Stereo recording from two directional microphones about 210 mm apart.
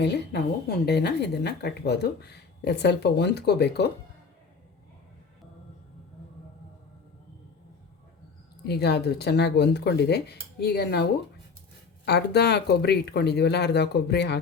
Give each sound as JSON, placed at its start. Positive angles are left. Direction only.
{"t": 0.0, "sound": "speech", "side_deg": 50}
{"t": 8.6, "sound": "speech", "side_deg": 50}
{"t": 12.0, "sound": "speech", "side_deg": 50}